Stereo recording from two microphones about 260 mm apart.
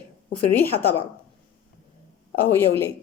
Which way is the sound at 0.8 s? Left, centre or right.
Centre.